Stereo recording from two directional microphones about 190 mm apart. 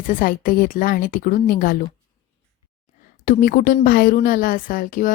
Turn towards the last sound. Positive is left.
turn(degrees=45)  # may be behind; listen again after turning